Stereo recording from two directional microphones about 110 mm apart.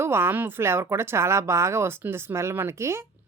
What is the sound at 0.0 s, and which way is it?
Speech, 20° right (ahead or behind).